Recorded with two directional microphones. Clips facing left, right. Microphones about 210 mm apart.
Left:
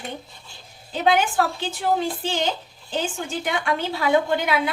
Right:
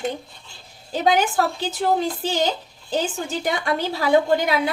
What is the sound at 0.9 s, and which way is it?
A woman's voice, 40° right (ahead or behind).